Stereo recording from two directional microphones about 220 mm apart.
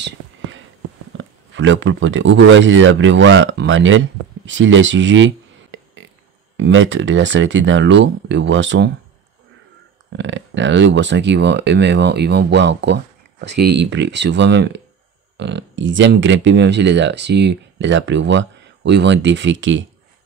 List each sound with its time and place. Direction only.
0.0 s a sound: 60° right (ahead or behind)
1.1 s speech: 60° right (ahead or behind)
10.1 s speech: 55° right (ahead or behind)